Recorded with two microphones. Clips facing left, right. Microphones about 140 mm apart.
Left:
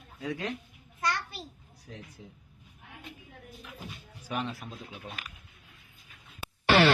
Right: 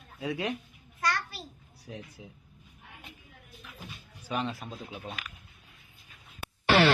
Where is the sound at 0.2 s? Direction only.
10° right (ahead or behind).